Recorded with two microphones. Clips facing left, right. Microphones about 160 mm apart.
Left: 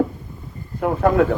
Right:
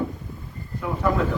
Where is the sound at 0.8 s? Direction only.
60° left (ahead or behind).